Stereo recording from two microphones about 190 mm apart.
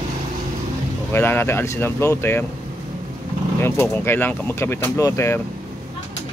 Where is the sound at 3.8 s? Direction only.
10° left (ahead or behind).